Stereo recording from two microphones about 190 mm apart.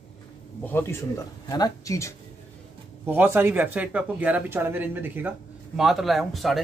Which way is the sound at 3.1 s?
10° right (ahead or behind).